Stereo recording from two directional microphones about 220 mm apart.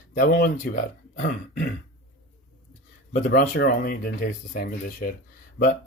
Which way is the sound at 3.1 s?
35° left (ahead or behind).